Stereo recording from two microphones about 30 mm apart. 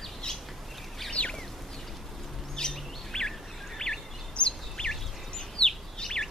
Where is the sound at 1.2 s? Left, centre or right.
Left.